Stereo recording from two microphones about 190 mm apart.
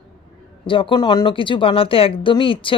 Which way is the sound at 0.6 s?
25° left (ahead or behind).